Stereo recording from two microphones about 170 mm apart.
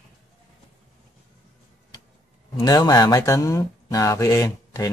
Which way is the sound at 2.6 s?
25° left (ahead or behind).